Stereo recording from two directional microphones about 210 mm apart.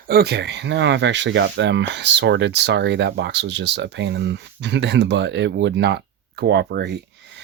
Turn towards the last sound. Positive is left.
turn(degrees=-55)  # may be behind; listen again after turning